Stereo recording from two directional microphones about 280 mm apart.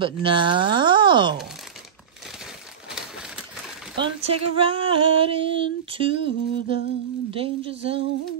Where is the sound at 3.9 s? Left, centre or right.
Centre.